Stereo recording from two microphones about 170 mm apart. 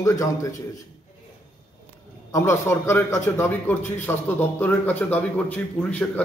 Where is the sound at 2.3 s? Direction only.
15° left (ahead or behind).